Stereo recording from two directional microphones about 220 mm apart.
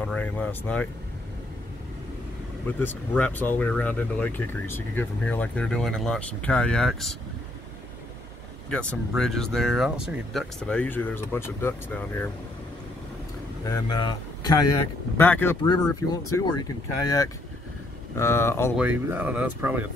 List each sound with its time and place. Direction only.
0.0 s speech: 5° left (ahead or behind)
2.8 s speech: 10° left (ahead or behind)
8.6 s speech: 5° left (ahead or behind)
13.7 s speech: 15° left (ahead or behind)
15.1 s speech: 10° left (ahead or behind)
18.8 s speech: 5° right (ahead or behind)